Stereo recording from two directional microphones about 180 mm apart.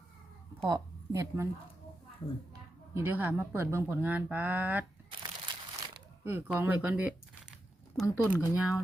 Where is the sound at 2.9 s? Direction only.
10° right (ahead or behind).